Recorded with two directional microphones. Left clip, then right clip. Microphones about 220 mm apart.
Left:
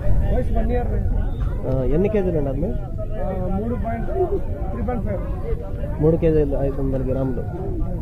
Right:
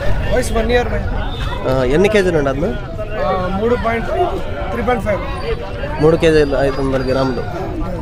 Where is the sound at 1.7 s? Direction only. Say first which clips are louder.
Right 8 dB; 15° right (ahead or behind).